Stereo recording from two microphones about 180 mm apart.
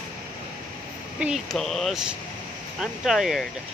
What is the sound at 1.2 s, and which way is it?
Speech, centre (ahead or behind).